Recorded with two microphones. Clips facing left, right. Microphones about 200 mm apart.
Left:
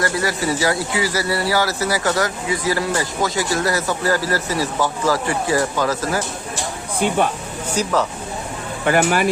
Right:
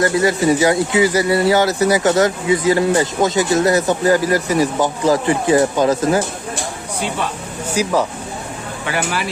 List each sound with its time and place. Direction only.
0.0 s speech: 20° right (ahead or behind)
7.8 s speech: 10° right (ahead or behind)
8.9 s speech: 50° left (ahead or behind)